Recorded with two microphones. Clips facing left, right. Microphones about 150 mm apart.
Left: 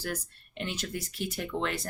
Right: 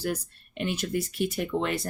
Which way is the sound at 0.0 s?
15° right (ahead or behind).